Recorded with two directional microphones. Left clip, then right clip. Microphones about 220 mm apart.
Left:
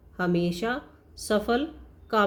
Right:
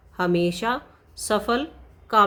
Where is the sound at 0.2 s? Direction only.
25° right (ahead or behind).